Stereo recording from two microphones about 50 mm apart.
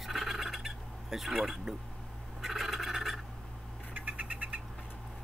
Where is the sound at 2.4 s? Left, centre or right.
Centre.